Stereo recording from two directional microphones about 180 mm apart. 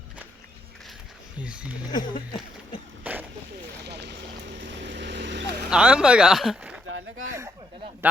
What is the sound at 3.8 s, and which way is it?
Vehicle, 70° right (ahead or behind).